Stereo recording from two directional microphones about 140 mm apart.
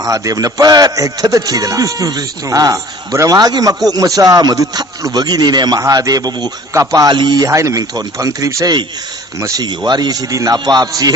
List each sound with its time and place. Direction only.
0.0 s speech: 25° right (ahead or behind)